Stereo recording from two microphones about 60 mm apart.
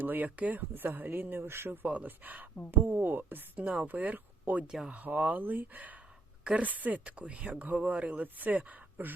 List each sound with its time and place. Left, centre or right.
0.0 s speech: right
0.7 s speech: right
4.6 s speech: centre
4.9 s speech: right